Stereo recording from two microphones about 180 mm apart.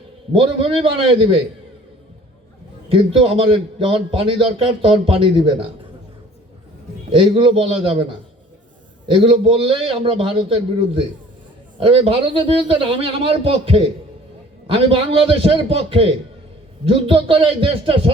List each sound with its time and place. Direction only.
0.3 s a man's voice: 30° right (ahead or behind)
2.9 s a man's voice: 30° right (ahead or behind)
7.1 s a man's voice: 30° right (ahead or behind)